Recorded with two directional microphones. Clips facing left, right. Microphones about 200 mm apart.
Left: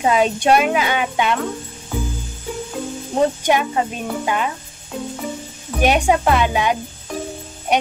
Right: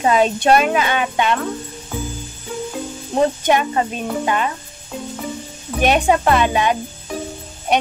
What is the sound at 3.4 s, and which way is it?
Speech, 5° left (ahead or behind).